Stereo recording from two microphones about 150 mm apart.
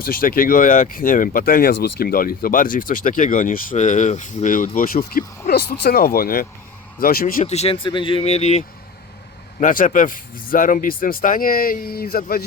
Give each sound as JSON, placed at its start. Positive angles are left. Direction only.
{"t": 0.0, "sound": "speech", "side_deg": 75}
{"t": 7.4, "sound": "speech", "side_deg": 45}
{"t": 9.6, "sound": "speech", "side_deg": 60}